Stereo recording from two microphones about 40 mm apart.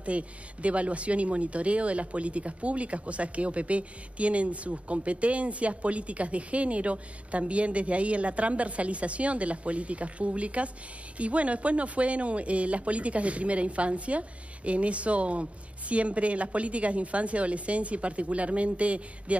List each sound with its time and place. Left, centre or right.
0.0 s speech: right